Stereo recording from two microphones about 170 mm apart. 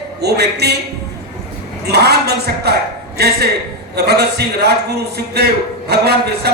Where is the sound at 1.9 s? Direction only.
75° right (ahead or behind).